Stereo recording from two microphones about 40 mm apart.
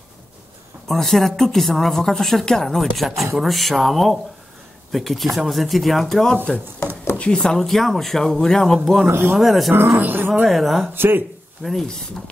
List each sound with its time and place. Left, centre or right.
0.8 s a woman's voice: centre
7.3 s a woman's voice: centre
8.7 s speech: centre
9.1 s speech: right
9.4 s speech: centre
9.8 s speech: right
10.0 s speech: right
10.4 s speech: centre
11.0 s speech: right
11.6 s a woman's voice: centre